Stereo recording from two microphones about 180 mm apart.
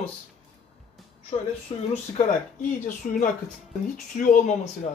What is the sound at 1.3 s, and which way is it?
Speech, 30° left (ahead or behind).